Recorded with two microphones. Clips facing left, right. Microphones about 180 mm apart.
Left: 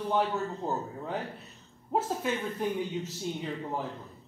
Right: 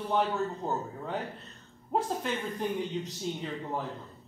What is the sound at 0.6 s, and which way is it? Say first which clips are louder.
Speech: even; 5° left (ahead or behind).